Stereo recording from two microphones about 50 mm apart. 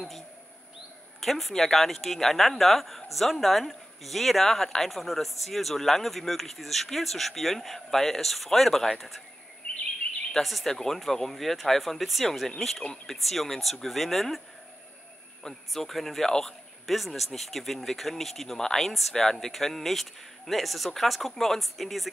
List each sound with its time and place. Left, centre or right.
1.2 s speech: centre
9.6 s bird vocalization: left
10.3 s speech: centre
15.7 s speech: centre